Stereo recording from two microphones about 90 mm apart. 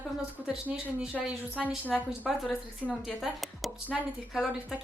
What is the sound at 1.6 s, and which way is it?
A woman's voice, centre (ahead or behind).